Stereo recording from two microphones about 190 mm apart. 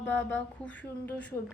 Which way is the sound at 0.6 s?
10° left (ahead or behind).